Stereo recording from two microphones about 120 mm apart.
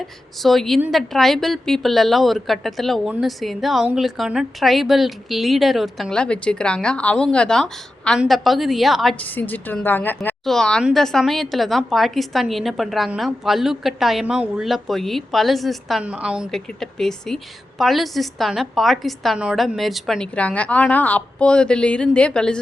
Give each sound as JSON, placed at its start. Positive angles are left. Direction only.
{"t": 0.4, "sound": "a woman's voice", "side_deg": 0}
{"t": 9.1, "sound": "a woman's voice", "side_deg": 15}
{"t": 10.4, "sound": "a woman's voice", "side_deg": 5}